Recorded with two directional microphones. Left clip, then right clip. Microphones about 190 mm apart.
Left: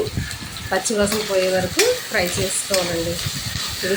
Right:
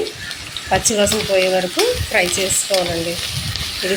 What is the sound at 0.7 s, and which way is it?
Speech, centre (ahead or behind).